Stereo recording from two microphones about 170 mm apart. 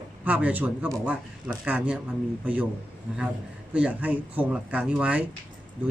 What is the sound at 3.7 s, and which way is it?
Speech, 10° right (ahead or behind).